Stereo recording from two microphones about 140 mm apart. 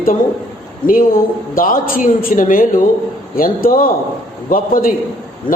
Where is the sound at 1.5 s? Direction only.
85° left.